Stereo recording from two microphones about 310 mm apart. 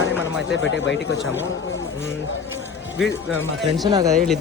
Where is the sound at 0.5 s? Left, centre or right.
Left.